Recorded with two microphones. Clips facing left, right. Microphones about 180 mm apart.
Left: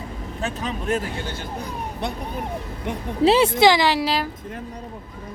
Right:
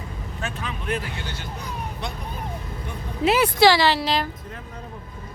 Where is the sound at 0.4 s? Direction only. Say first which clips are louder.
Left 4 dB; 40° left (ahead or behind); by 2.1 s 55° left (ahead or behind).